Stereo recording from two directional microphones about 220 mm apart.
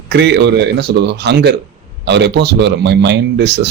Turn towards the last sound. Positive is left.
turn(degrees=-50)  # may be behind; listen again after turning